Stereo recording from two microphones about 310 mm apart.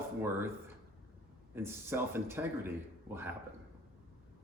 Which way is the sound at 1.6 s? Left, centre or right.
Centre.